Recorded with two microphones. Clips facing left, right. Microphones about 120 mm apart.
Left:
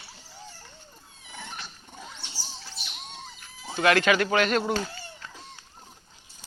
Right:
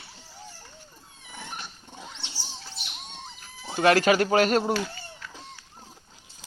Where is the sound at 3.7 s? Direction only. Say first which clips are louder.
Right 2 dB; 40° right (ahead or behind).